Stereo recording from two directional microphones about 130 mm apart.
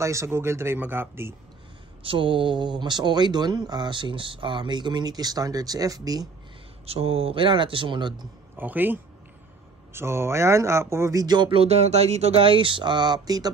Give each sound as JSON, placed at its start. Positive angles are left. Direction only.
{"t": 0.0, "sound": "speech", "side_deg": -20}
{"t": 2.0, "sound": "speech", "side_deg": -40}
{"t": 6.9, "sound": "speech", "side_deg": -50}
{"t": 8.5, "sound": "speech", "side_deg": -15}